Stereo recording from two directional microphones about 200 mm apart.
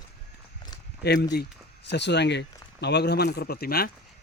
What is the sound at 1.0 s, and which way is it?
Speech, 55° left (ahead or behind).